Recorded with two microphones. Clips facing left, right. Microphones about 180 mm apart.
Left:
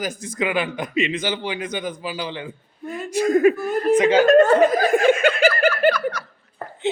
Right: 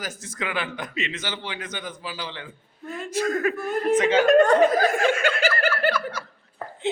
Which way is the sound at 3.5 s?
Centre (ahead or behind).